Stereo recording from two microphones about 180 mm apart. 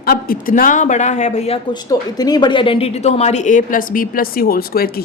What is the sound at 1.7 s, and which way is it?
A woman's voice, 20° left (ahead or behind).